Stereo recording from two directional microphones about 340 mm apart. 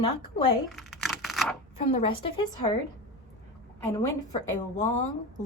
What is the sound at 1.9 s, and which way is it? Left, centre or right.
Speech, centre.